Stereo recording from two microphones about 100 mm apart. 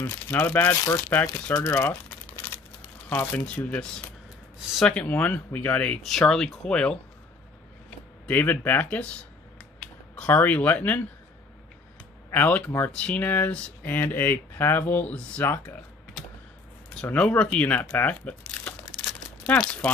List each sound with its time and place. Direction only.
0.0 s speech: 20° left (ahead or behind)
8.3 s speech: 15° left (ahead or behind)
10.1 s speech: 15° left (ahead or behind)
12.3 s speech: 15° left (ahead or behind)
16.9 s speech: 15° left (ahead or behind)
18.5 s crumpling: 10° left (ahead or behind)
19.4 s speech: 15° left (ahead or behind)